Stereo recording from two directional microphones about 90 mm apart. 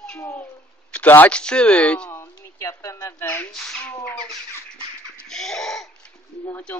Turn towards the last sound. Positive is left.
turn(degrees=20)  # may be behind; listen again after turning